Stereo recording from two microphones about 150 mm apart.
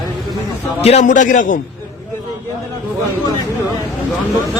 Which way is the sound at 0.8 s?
45° left (ahead or behind).